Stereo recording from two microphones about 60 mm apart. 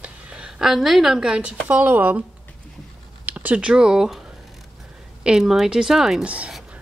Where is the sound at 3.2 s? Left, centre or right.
Right; by 6.2 s centre.